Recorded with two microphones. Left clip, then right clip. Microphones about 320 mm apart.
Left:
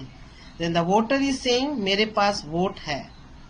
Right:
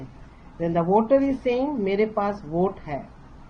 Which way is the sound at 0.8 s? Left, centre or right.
Left.